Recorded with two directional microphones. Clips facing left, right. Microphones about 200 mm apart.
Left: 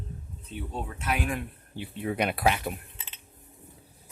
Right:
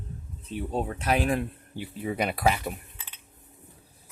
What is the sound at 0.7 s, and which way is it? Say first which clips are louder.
Speech: right 6 dB; 35° right (ahead or behind).